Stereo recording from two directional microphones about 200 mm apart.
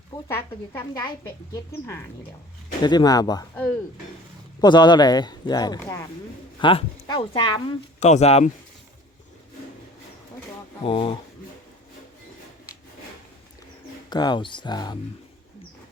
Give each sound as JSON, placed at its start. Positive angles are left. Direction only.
{"t": 0.1, "sound": "speech", "side_deg": 10}
{"t": 2.8, "sound": "speech", "side_deg": 20}
{"t": 4.6, "sound": "speech", "side_deg": 20}
{"t": 10.8, "sound": "speech", "side_deg": 25}
{"t": 14.1, "sound": "speech", "side_deg": 20}